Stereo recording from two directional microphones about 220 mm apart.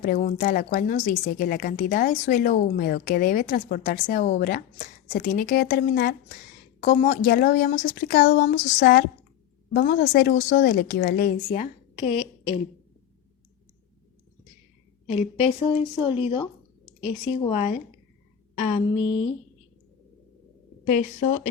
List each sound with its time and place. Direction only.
0.0 s a woman's voice: 40° left (ahead or behind)
15.1 s a woman's voice: 30° left (ahead or behind)